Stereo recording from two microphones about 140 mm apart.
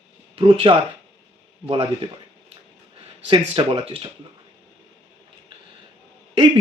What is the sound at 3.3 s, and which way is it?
Speech, 40° right (ahead or behind).